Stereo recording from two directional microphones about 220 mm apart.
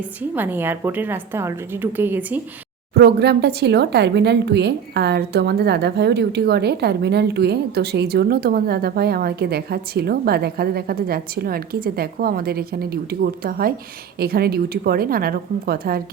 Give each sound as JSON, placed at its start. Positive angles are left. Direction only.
{"t": 0.2, "sound": "a woman's voice", "side_deg": -10}
{"t": 2.9, "sound": "speech", "side_deg": -50}